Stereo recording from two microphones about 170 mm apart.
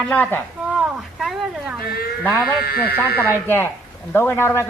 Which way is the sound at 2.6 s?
65° left (ahead or behind).